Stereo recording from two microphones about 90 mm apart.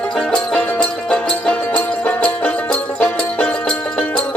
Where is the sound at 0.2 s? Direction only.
10° left (ahead or behind).